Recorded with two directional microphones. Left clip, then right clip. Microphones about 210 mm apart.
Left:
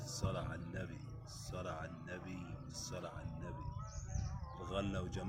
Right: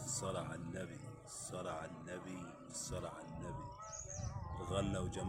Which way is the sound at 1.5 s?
5° right (ahead or behind).